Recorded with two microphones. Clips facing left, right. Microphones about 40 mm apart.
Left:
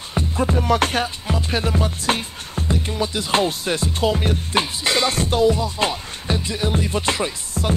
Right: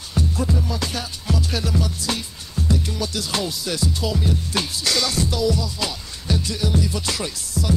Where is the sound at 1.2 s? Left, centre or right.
Left.